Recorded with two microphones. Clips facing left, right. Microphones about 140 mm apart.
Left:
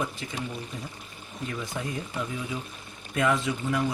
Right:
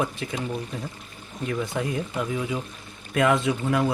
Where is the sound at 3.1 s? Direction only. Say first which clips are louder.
Right 4 dB; 65° right (ahead or behind).